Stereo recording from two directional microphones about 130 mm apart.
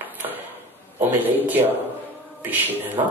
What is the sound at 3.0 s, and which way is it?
Speech, 35° right (ahead or behind).